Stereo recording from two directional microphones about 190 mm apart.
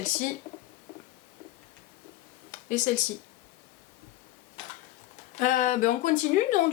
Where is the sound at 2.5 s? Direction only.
40° left (ahead or behind).